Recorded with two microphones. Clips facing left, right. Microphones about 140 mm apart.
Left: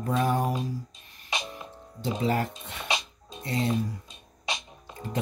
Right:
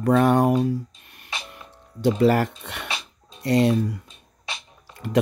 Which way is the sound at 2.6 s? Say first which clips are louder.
Right 4 dB; 75° right (ahead or behind).